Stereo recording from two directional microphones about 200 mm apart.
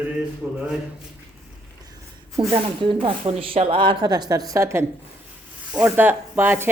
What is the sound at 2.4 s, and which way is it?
A woman's voice, 25° right (ahead or behind).